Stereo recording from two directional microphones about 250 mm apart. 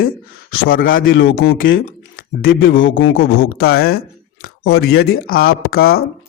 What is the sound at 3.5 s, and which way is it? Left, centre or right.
A man's voice, left.